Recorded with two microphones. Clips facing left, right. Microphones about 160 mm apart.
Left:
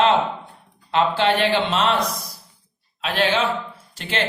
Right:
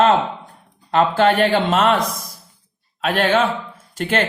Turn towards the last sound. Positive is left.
turn(degrees=-50)  # may be behind; listen again after turning